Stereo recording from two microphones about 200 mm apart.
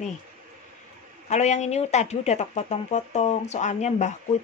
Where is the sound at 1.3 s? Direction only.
35° left (ahead or behind).